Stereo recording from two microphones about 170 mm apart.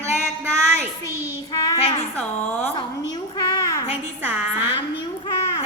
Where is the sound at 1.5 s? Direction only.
20° left (ahead or behind).